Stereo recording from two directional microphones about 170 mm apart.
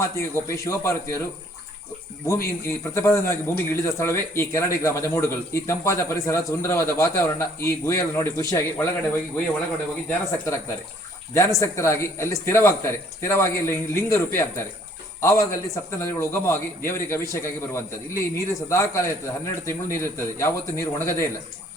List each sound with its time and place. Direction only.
0.0 s a man's voice: 15° left (ahead or behind)
2.2 s a man's voice: 15° left (ahead or behind)
11.3 s a man's voice: 15° left (ahead or behind)